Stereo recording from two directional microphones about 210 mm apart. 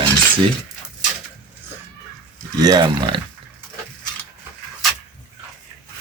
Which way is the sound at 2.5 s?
20° right (ahead or behind).